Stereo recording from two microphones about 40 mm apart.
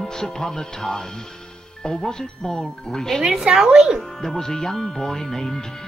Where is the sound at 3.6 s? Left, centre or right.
Right.